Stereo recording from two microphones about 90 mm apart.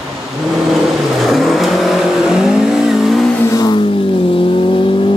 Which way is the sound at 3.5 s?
50° left (ahead or behind).